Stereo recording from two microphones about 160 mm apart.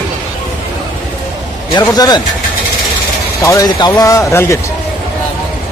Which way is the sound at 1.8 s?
25° left (ahead or behind).